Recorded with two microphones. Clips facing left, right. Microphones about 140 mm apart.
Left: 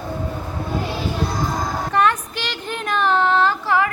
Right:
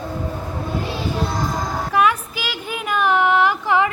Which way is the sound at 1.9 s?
10° right (ahead or behind).